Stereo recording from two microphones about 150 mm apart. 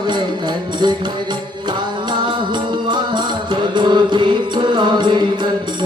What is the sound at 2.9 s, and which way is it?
Music, 30° right (ahead or behind).